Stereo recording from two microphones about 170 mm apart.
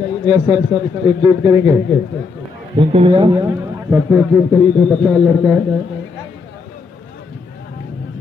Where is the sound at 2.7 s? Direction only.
30° right (ahead or behind).